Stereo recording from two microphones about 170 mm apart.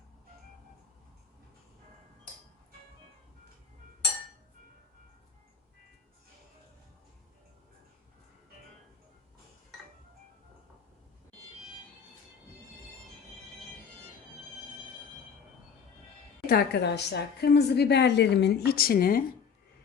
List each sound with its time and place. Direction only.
16.5 s a woman's voice: 75° left (ahead or behind)